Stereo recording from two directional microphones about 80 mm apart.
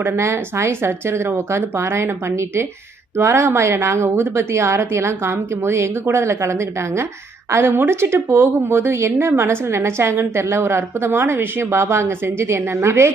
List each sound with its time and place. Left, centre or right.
0.0 s speech: right